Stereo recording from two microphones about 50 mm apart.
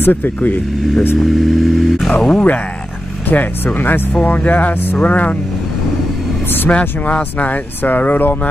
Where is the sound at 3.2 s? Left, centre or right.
Left.